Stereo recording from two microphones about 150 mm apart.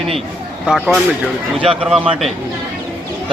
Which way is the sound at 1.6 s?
40° right (ahead or behind).